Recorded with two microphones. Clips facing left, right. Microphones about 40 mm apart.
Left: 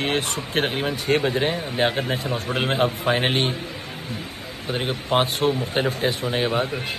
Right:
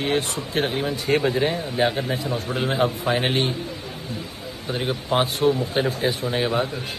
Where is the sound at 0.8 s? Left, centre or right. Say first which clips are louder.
Even; left.